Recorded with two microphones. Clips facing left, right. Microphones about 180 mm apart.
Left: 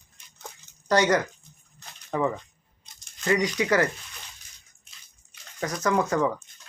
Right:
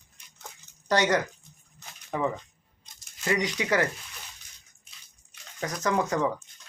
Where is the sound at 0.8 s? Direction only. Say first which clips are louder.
Left 3 dB; 20° right (ahead or behind).